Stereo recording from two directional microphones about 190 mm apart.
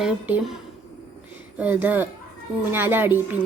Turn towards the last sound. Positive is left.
turn(degrees=-10)  # may be behind; listen again after turning